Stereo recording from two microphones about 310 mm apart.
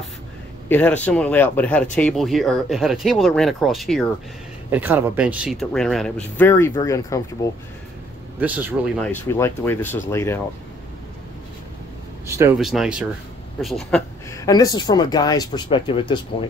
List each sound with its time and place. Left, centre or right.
0.7 s speech: centre
8.4 s speech: centre
12.3 s speech: centre